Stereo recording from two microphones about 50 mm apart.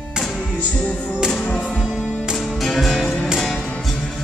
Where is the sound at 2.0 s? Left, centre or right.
Centre.